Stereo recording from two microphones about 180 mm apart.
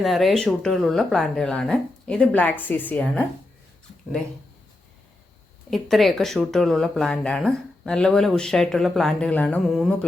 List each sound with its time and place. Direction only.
0.0 s speech: centre (ahead or behind)
5.7 s speech: centre (ahead or behind)